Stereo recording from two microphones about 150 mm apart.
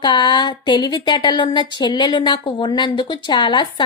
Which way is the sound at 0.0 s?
30° left (ahead or behind).